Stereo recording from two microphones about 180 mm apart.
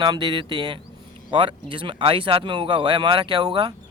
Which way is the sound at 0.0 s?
25° right (ahead or behind).